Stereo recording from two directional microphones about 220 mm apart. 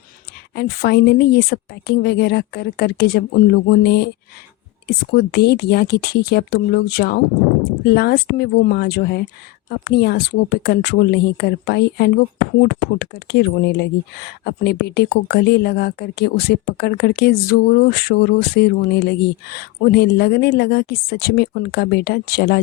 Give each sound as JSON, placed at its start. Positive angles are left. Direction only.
{"t": 0.5, "sound": "speech", "side_deg": 45}